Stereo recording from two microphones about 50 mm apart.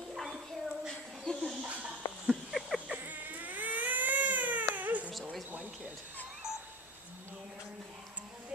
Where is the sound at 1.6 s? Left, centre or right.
Right.